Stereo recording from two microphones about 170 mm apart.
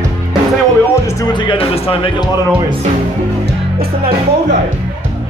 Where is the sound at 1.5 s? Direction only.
30° left (ahead or behind).